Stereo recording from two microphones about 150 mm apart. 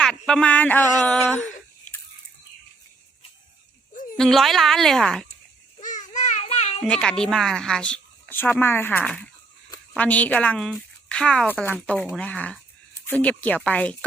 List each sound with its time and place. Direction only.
0.0 s speech: 5° left (ahead or behind)
4.2 s speech: centre (ahead or behind)
5.8 s a sound: 55° left (ahead or behind)
6.8 s speech: 5° left (ahead or behind)